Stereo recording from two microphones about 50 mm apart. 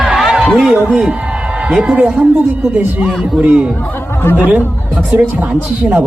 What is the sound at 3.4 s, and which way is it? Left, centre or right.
A man's voice, right.